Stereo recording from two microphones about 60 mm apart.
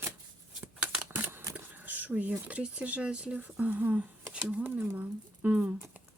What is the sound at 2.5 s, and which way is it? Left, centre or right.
Speech, right.